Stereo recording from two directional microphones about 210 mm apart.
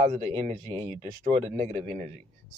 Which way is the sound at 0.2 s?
30° right (ahead or behind).